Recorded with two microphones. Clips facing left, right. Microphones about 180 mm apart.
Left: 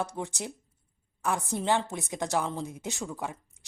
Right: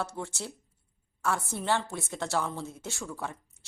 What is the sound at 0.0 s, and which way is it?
A woman's voice, 15° left (ahead or behind).